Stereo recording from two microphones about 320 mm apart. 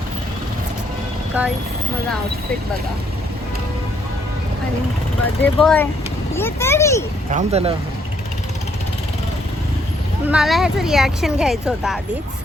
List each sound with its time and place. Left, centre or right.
1.4 s speech: centre
5.4 s speech: centre
7.3 s speech: centre
10.2 s speech: centre